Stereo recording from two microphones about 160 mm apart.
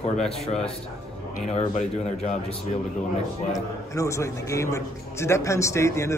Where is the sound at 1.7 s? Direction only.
50° left (ahead or behind).